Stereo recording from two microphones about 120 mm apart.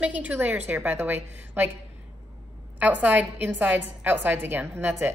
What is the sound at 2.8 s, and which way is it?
A woman's voice, 15° right (ahead or behind).